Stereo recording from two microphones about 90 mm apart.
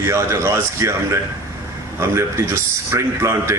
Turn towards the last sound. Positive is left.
turn(degrees=-30)  # may be behind; listen again after turning